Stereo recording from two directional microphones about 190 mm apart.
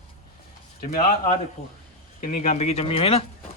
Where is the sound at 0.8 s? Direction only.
50° left (ahead or behind).